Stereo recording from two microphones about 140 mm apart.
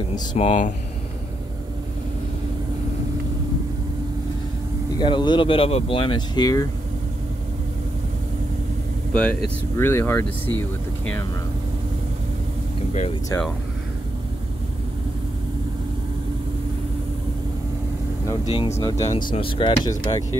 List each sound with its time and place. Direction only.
0.4 s speech: 60° left (ahead or behind)
4.9 s speech: 35° left (ahead or behind)
9.1 s speech: 5° left (ahead or behind)
18.4 s speech: 45° left (ahead or behind)
18.8 s speech: 25° left (ahead or behind)
19.3 s speech: 40° left (ahead or behind)
19.8 s speech: 25° left (ahead or behind)